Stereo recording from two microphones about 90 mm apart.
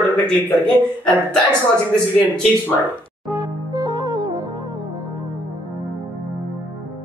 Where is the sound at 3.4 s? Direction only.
45° right (ahead or behind).